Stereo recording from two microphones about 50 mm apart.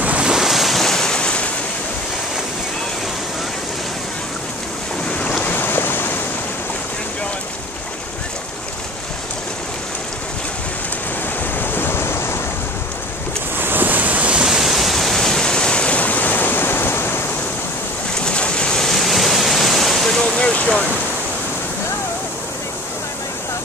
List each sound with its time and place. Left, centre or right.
0.0 s waves: right
0.3 s waves: centre; by 1.5 s left
5.0 s waves: left
5.4 s waves: left
11.5 s waves: left
13.6 s waves: right
14.4 s waves: centre; by 17.2 s left
18.2 s waves: centre
20.2 s vehicle: centre